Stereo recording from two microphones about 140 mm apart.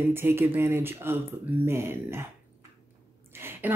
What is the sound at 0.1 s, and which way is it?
Speech, 15° right (ahead or behind).